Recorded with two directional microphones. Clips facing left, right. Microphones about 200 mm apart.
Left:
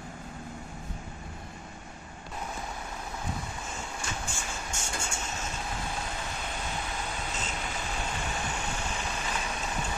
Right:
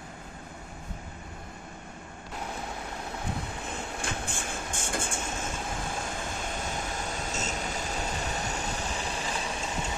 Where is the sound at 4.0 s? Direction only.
55° right (ahead or behind).